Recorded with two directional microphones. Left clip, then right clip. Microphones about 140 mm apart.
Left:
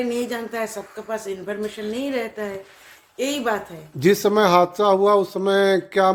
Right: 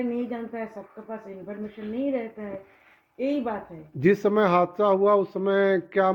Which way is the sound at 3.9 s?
30° left (ahead or behind).